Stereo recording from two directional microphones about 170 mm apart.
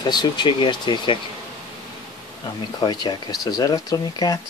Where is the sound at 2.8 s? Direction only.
25° left (ahead or behind).